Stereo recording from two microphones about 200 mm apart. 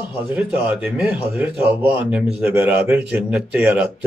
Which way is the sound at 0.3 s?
5° right (ahead or behind).